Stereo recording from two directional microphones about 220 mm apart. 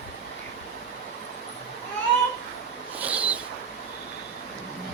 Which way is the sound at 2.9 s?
5° right (ahead or behind).